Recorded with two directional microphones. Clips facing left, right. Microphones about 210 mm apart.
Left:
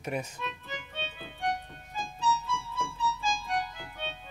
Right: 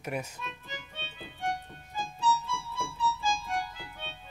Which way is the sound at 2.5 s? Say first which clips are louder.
Left 2 dB; 10° right (ahead or behind).